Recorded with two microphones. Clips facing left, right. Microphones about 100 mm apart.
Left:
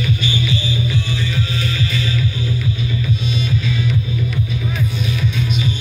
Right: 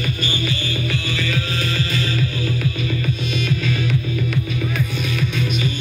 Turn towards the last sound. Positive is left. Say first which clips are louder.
# left 1 dB
turn(degrees=-55)  # may be behind; listen again after turning